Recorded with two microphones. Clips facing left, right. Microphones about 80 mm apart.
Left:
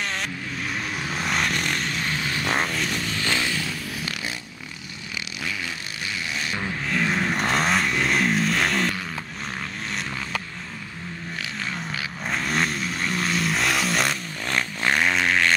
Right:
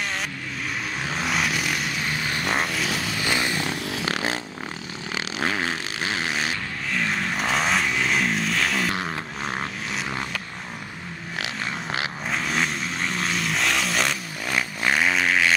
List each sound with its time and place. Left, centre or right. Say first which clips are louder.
1.1 s vehicle: even; centre
3.6 s a sound: right 3 dB; right
4.0 s a sound: right 6 dB; right
5.4 s fart: right 7 dB; right
6.9 s vehicle: left 2 dB; centre
12.3 s vehicle: left 2 dB; centre